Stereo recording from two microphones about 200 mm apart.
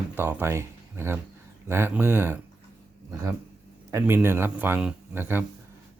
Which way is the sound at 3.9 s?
10° right (ahead or behind).